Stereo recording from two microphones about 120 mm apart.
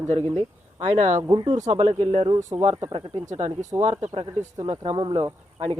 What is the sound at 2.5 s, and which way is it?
Speech, 45° right (ahead or behind).